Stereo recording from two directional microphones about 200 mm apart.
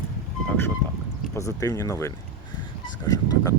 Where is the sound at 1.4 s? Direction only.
15° left (ahead or behind).